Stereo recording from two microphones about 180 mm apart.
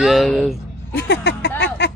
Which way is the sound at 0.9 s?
70° left (ahead or behind).